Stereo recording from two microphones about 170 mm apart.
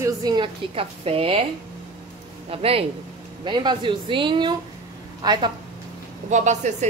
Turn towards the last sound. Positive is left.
turn(degrees=-45)  # may be behind; listen again after turning